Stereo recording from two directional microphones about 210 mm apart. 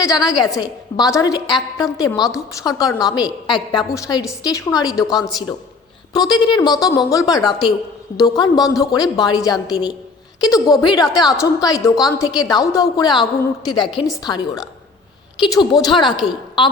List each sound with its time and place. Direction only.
0.0 s a woman's voice: 15° left (ahead or behind)